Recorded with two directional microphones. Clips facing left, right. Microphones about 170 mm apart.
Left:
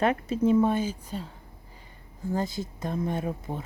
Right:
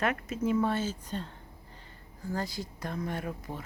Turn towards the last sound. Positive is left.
turn(degrees=25)  # may be behind; listen again after turning